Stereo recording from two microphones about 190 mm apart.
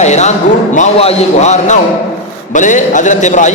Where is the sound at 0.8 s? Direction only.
35° left (ahead or behind).